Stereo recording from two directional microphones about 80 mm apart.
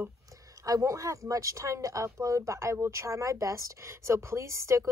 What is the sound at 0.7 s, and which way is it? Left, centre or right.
A woman's voice, right.